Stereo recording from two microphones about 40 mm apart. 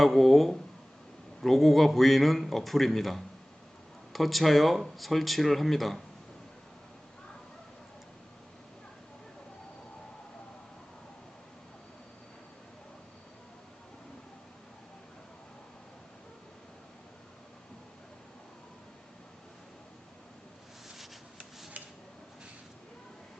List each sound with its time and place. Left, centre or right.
0.0 s a man's voice: centre